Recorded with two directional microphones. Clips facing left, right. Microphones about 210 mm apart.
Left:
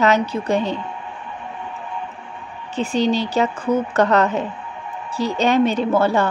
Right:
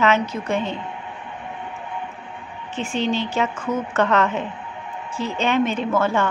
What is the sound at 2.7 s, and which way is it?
Speech, 35° left (ahead or behind).